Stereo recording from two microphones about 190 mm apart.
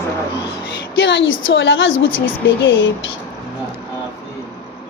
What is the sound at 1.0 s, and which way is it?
A woman's voice, 70° left (ahead or behind).